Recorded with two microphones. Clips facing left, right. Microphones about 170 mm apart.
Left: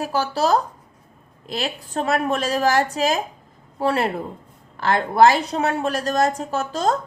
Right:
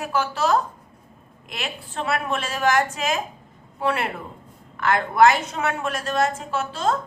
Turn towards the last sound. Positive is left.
turn(degrees=40)  # may be behind; listen again after turning